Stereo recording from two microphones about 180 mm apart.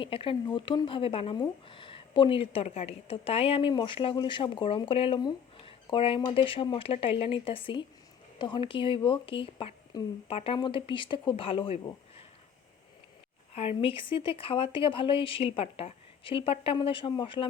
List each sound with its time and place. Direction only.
0.0 s speech: 30° left (ahead or behind)
13.5 s speech: 35° left (ahead or behind)